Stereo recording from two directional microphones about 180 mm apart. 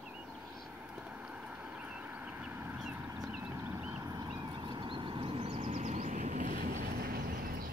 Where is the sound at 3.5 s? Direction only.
15° right (ahead or behind).